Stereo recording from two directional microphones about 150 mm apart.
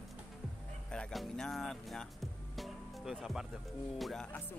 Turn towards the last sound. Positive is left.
turn(degrees=5)  # may be behind; listen again after turning